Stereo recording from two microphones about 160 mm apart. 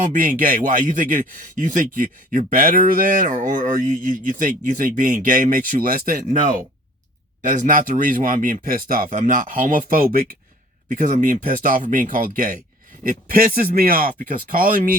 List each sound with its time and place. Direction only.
0.0 s speech: 55° right (ahead or behind)